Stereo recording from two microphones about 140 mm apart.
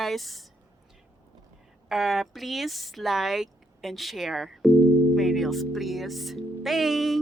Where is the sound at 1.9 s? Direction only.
Centre (ahead or behind).